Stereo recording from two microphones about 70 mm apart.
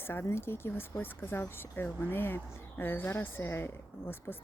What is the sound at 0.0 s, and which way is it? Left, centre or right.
Speech, left.